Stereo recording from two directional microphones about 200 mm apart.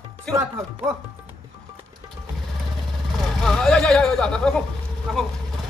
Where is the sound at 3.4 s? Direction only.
5° left (ahead or behind).